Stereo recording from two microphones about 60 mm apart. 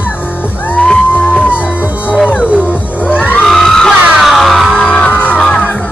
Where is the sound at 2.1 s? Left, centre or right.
Centre.